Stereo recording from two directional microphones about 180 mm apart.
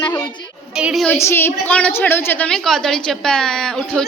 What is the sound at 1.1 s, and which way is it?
A woman's voice, 15° left (ahead or behind).